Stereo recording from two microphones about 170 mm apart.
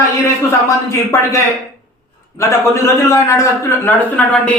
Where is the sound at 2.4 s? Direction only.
15° left (ahead or behind).